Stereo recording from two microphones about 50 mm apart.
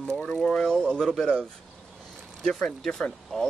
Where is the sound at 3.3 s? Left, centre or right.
Centre.